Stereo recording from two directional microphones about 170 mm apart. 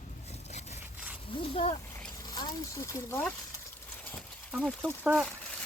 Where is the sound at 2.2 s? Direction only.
25° left (ahead or behind).